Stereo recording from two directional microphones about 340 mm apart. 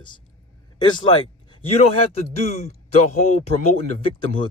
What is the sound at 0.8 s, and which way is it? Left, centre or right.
Speech, centre.